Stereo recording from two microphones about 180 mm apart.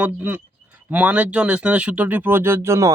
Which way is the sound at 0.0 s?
10° right (ahead or behind).